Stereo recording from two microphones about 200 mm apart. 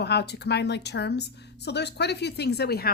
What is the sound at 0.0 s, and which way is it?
A woman's voice, 55° left (ahead or behind).